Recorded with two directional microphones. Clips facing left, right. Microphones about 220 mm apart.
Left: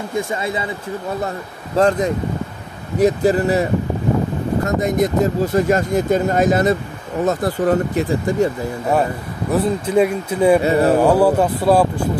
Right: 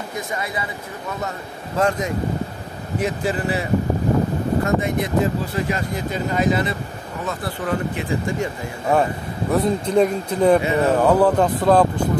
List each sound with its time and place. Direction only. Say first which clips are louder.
0.1 s speech: left 7 dB; 25° left (ahead or behind)
1.8 s speech: left 5 dB; 35° left (ahead or behind)
4.6 s speech: left 3 dB; 40° left (ahead or behind)
9.5 s speech: left 1 dB; 5° left (ahead or behind)
10.6 s speech: left 4 dB; 35° left (ahead or behind)
11.0 s speech: left 2 dB; 10° left (ahead or behind)